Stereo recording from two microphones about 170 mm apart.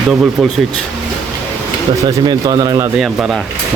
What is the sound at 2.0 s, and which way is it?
Speech, 25° right (ahead or behind).